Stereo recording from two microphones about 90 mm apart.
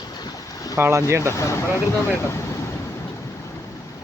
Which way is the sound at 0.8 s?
30° right (ahead or behind).